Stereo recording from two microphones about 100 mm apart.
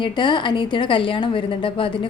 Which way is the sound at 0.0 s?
50° left (ahead or behind).